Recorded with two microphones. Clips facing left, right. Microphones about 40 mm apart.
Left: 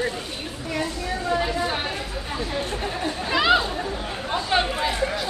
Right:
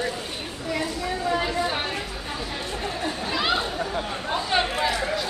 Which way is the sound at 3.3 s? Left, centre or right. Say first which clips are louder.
Left 7 dB; left.